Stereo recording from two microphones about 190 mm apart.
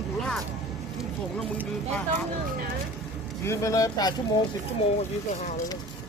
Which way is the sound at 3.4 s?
15° left (ahead or behind).